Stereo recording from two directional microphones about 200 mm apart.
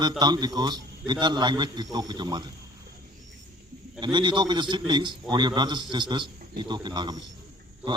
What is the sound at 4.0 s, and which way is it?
A man's voice, 25° right (ahead or behind).